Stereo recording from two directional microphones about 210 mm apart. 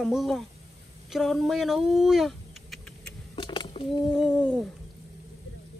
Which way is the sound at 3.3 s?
20° left (ahead or behind).